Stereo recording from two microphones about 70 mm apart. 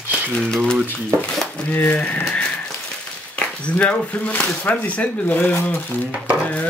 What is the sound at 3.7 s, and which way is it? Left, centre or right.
Speech, centre.